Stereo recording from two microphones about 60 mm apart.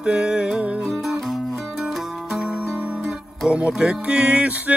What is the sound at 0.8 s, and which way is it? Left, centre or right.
Music, centre.